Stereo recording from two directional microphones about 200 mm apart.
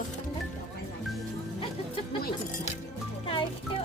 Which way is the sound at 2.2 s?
40° left (ahead or behind).